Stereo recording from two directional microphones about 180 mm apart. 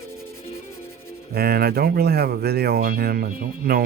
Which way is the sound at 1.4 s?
60° right (ahead or behind).